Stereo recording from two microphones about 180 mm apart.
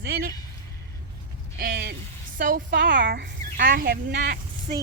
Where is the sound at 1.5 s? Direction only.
55° right (ahead or behind).